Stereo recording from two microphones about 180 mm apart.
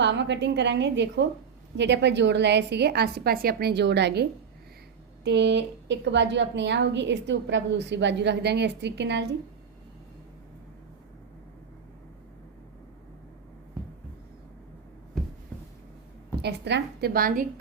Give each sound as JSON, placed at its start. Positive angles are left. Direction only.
{"t": 0.0, "sound": "a woman's voice", "side_deg": -75}
{"t": 15.1, "sound": "a sound", "side_deg": 0}
{"t": 16.4, "sound": "a woman's voice", "side_deg": -70}